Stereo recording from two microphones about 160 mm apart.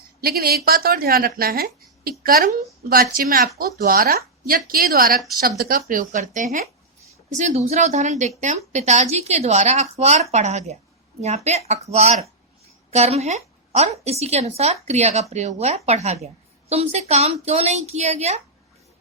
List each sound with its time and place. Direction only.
0.2 s a woman's voice: 70° right (ahead or behind); by 18.3 s 40° right (ahead or behind)